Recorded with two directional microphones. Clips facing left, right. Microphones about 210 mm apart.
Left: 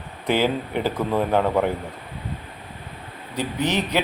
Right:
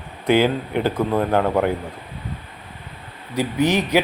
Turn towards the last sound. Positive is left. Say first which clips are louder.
# right 5 dB
turn(degrees=-10)  # may be behind; listen again after turning